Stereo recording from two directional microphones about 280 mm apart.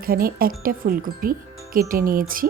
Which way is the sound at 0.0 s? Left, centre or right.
Right.